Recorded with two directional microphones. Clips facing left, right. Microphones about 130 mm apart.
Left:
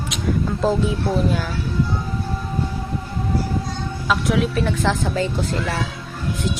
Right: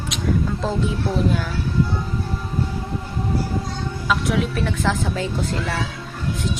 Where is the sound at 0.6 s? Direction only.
5° left (ahead or behind).